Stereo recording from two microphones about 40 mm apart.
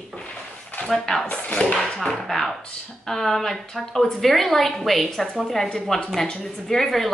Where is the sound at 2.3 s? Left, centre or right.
Centre.